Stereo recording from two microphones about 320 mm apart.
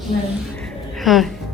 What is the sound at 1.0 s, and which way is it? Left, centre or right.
Speech, centre.